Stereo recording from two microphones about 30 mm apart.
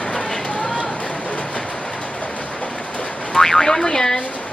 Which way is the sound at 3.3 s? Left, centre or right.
Centre.